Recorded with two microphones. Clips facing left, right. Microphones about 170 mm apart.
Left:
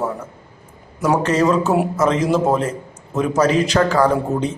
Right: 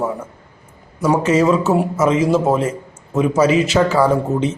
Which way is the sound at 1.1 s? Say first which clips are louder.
Right 2 dB; 5° right (ahead or behind).